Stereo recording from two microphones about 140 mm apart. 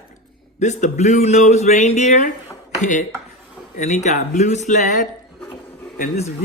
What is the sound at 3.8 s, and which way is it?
Speech, 55° left (ahead or behind).